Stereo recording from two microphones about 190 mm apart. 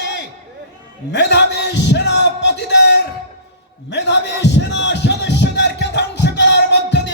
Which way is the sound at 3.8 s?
65° left (ahead or behind).